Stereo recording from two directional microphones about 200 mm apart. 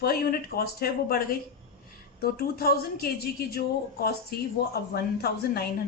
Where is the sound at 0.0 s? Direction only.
50° left (ahead or behind).